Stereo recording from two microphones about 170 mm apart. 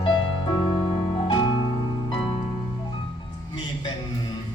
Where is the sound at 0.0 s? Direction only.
30° left (ahead or behind).